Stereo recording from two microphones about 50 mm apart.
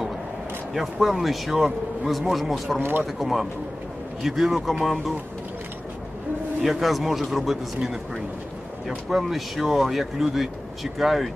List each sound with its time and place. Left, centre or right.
0.7 s speech: centre
2.8 s speech: right
3.2 s speech: centre
6.6 s speech: centre